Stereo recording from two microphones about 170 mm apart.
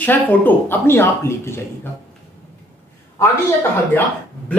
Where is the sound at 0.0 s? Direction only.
10° left (ahead or behind).